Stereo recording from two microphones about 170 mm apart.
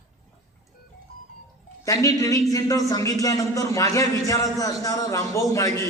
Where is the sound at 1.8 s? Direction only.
20° left (ahead or behind).